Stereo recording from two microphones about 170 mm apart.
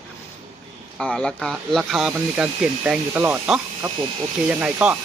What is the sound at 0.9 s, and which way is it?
Speech, 5° left (ahead or behind).